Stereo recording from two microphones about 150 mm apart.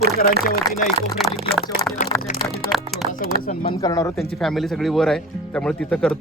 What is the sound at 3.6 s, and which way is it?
Speech, 25° left (ahead or behind).